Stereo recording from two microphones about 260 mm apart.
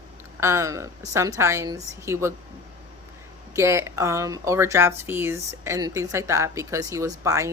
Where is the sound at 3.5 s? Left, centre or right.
Centre.